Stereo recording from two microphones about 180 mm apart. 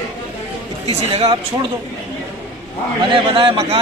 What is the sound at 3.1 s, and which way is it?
Speech, 30° right (ahead or behind).